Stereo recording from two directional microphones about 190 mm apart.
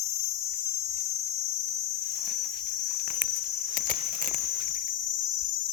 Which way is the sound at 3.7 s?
40° right (ahead or behind).